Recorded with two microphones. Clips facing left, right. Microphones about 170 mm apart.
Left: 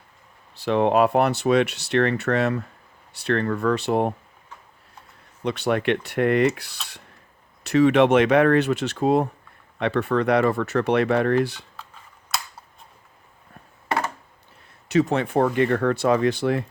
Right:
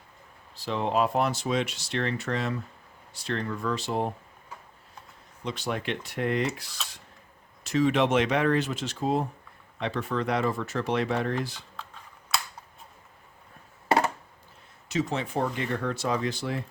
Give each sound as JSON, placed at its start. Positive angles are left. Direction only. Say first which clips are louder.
{"t": 0.5, "sound": "speech", "louder": "left 8 dB", "side_deg": 65}
{"t": 5.4, "sound": "speech", "louder": "left 9 dB", "side_deg": 65}
{"t": 14.8, "sound": "speech", "louder": "left 8 dB", "side_deg": 65}